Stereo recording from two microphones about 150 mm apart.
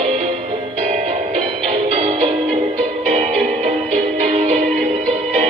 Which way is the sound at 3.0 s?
55° right (ahead or behind).